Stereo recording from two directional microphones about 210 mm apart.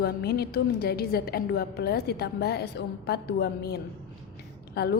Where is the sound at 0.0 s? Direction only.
50° left (ahead or behind).